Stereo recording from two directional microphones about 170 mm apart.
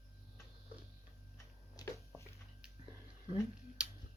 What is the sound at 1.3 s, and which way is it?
Tick-tock, 20° left (ahead or behind).